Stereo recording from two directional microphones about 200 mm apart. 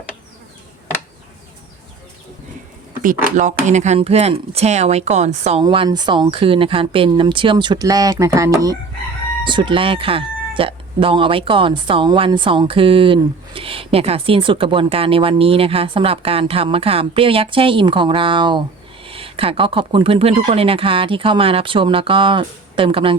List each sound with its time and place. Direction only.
3.3 s speech: 35° right (ahead or behind)